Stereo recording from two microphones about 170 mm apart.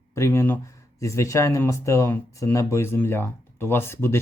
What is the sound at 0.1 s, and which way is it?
Speech, 15° left (ahead or behind).